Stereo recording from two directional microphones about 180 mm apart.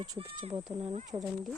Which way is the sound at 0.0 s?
25° right (ahead or behind).